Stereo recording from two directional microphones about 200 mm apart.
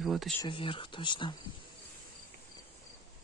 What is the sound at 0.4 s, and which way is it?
Speech, 25° left (ahead or behind).